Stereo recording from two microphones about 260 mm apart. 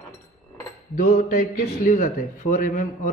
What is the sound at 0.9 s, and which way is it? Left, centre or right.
Cutlery, left.